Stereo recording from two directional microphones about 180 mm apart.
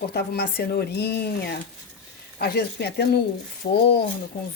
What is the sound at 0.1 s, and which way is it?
Speech, 65° left (ahead or behind).